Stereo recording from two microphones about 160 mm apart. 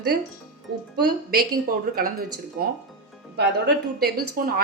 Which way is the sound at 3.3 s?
85° right.